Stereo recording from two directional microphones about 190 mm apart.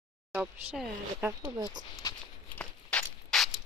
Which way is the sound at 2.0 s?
20° left (ahead or behind).